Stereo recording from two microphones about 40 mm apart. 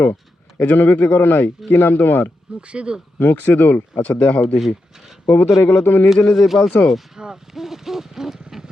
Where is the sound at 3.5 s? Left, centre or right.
Left.